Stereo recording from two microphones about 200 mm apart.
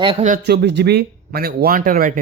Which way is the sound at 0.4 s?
55° right (ahead or behind).